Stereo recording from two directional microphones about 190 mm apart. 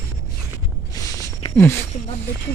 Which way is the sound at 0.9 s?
15° left (ahead or behind).